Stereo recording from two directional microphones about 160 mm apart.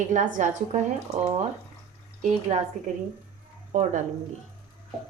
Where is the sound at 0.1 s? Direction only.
50° right (ahead or behind).